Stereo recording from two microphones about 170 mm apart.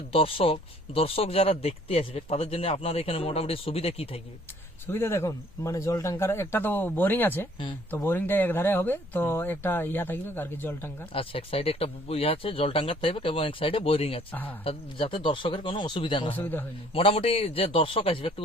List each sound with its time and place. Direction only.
0.1 s speech: 35° left (ahead or behind)
4.9 s speech: 15° left (ahead or behind)
11.1 s speech: 35° left (ahead or behind)
16.3 s speech: 10° left (ahead or behind)
16.9 s speech: 35° left (ahead or behind)